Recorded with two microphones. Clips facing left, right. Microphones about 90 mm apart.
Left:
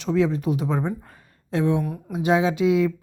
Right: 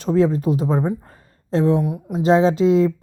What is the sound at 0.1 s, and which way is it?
A woman's voice, 35° right (ahead or behind).